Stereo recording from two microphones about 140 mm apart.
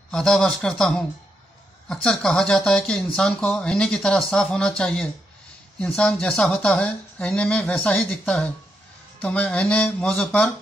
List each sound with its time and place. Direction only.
0.1 s speech: 5° left (ahead or behind)